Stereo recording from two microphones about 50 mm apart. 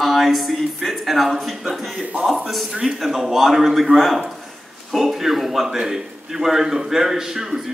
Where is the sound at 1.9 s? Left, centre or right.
Right.